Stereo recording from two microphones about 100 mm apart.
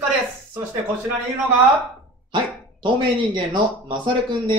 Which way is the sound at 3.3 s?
50° right (ahead or behind).